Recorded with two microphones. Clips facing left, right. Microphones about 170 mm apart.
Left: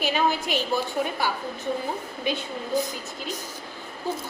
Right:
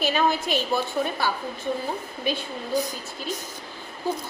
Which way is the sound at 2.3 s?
20° left (ahead or behind).